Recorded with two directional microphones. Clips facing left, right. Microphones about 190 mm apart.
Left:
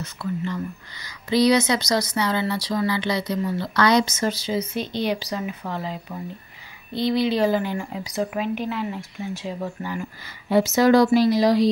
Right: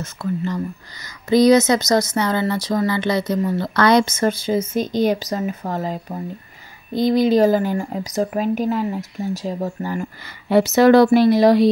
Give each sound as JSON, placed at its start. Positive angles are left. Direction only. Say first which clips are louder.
{"t": 0.0, "sound": "speech", "louder": "right 4 dB", "side_deg": -45}
{"t": 10.5, "sound": "speech", "louder": "right 4 dB", "side_deg": -65}